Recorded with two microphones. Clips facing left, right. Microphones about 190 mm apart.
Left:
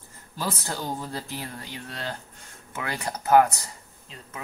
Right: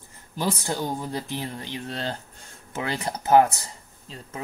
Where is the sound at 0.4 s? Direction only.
20° right (ahead or behind).